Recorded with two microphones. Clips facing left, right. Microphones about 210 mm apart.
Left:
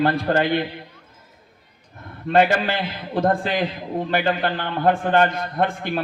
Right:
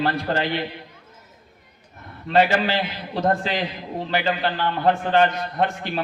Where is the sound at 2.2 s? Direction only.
50° left (ahead or behind).